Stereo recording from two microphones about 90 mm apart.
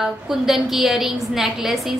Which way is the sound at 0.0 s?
5° right (ahead or behind).